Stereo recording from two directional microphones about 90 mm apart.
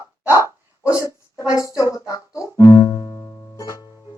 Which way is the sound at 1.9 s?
35° left (ahead or behind).